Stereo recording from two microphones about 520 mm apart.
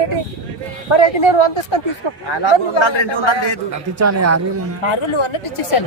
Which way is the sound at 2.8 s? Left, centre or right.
Left.